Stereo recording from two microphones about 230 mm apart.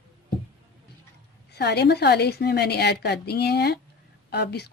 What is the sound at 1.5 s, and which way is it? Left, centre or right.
A woman's voice, left.